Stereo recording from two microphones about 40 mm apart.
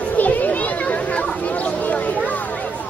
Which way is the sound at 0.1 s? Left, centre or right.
Left.